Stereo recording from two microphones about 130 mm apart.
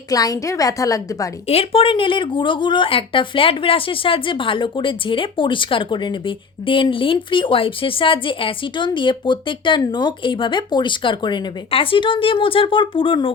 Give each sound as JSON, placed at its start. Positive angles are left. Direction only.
{"t": 0.1, "sound": "a woman's voice", "side_deg": 30}
{"t": 1.5, "sound": "speech", "side_deg": 45}